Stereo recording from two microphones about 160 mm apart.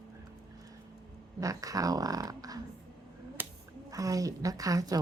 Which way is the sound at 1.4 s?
20° right (ahead or behind).